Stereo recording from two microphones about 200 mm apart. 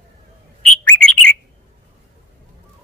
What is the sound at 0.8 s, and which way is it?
Bird, 5° left (ahead or behind).